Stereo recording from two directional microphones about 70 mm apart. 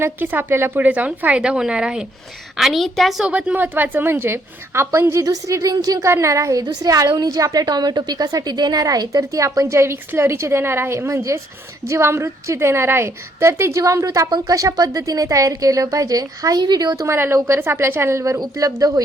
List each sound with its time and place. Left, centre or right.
0.0 s a woman's voice: right
0.8 s a woman's voice: right; by 3.2 s centre
3.2 s a woman's voice: centre; by 5.2 s right
5.2 s a woman's voice: right
6.1 s a woman's voice: right
14.3 s speech: right
14.5 s a woman's voice: right
17.1 s a woman's voice: right
18.3 s a woman's voice: right